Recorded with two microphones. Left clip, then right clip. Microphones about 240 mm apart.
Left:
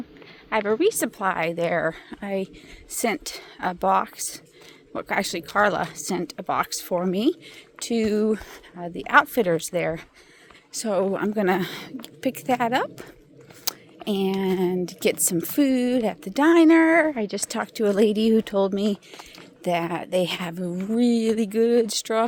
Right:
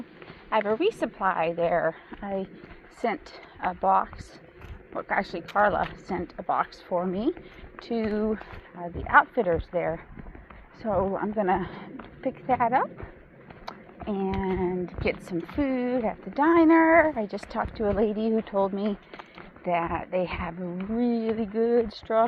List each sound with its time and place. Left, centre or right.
0.5 s a woman's voice: left
7.8 s a woman's voice: left
12.2 s speech: left
13.7 s a sound: left
14.4 s a woman's voice: left
16.0 s a woman's voice: left